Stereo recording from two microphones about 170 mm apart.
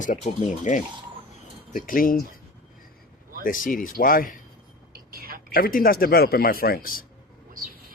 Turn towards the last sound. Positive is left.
turn(degrees=55)  # may be behind; listen again after turning